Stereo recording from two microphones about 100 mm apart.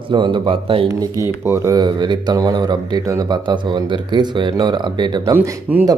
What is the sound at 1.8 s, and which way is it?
A man's voice, 45° right (ahead or behind).